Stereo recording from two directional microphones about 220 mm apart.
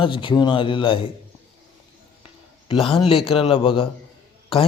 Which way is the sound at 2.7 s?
25° left (ahead or behind).